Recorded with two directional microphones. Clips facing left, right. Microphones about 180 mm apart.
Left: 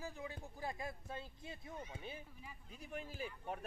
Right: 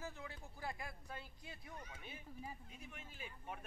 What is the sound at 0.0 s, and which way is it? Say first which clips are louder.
Speech: left 3 dB; 15° left (ahead or behind).